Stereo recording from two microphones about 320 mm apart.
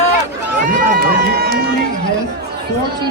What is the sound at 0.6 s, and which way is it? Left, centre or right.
Speech, right.